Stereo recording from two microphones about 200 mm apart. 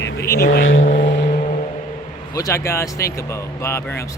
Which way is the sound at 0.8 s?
40° left (ahead or behind).